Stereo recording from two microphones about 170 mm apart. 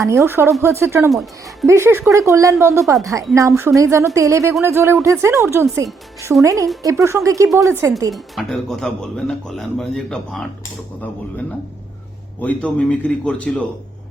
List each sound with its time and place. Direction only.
0.0 s speech: 20° right (ahead or behind)
8.1 s speech: centre (ahead or behind)
12.4 s a man's voice: 10° left (ahead or behind)